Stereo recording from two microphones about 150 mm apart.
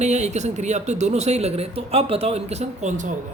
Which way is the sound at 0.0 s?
50° right (ahead or behind).